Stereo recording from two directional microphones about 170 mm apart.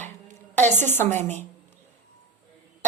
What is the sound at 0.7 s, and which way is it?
Speech, 15° left (ahead or behind).